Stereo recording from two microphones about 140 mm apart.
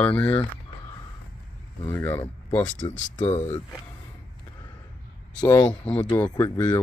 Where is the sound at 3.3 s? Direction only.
50° left (ahead or behind).